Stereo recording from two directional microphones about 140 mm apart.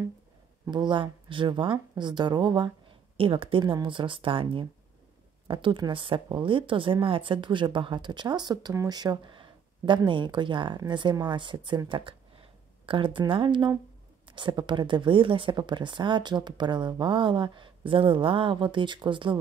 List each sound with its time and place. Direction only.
0.7 s speech: 35° right (ahead or behind)